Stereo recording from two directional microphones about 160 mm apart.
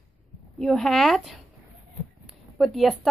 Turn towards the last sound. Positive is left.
turn(degrees=0)  # may be behind; listen again after turning